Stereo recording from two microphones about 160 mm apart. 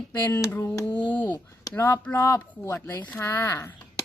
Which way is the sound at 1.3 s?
25° left (ahead or behind).